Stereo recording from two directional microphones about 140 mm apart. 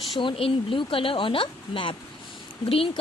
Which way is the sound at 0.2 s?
40° left (ahead or behind).